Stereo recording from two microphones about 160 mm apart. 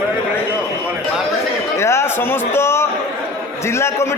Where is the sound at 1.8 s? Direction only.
15° left (ahead or behind).